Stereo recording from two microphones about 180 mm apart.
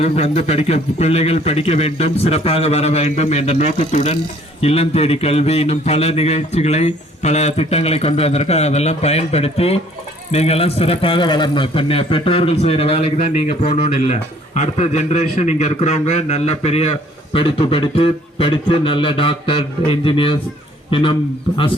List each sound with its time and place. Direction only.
0.0 s a man's voice: 35° left (ahead or behind)